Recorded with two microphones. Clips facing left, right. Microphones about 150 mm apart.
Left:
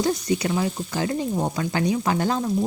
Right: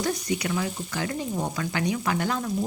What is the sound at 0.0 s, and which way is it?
A woman's voice, 25° left (ahead or behind).